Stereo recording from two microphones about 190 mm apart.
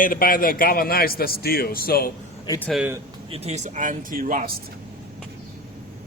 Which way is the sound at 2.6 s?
Centre (ahead or behind).